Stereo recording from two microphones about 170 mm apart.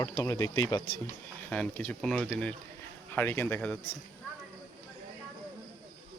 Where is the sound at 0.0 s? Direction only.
20° left (ahead or behind).